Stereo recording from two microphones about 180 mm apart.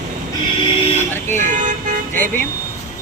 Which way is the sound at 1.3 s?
45° right (ahead or behind).